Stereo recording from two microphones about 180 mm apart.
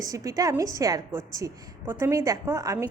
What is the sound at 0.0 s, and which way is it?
A woman's voice, 20° right (ahead or behind).